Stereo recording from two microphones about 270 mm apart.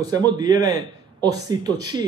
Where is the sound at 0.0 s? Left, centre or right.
Centre.